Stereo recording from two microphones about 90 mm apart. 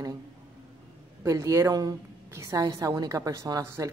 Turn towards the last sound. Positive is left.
turn(degrees=-40)  # may be behind; listen again after turning